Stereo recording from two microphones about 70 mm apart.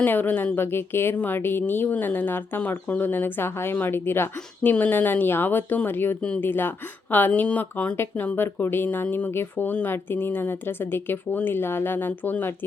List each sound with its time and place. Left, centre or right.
0.0 s speech: left